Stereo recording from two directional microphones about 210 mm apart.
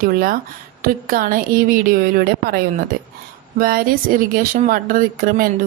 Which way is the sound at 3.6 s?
40° right (ahead or behind).